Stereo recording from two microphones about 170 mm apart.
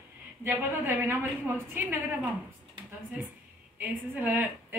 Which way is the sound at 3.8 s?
10° right (ahead or behind).